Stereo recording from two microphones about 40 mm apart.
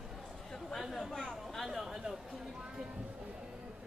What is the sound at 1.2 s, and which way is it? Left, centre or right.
Chatter, centre.